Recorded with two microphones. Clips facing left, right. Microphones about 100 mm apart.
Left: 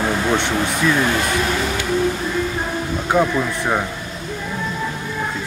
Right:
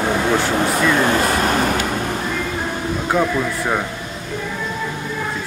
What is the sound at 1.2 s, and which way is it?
Speech, 45° right (ahead or behind).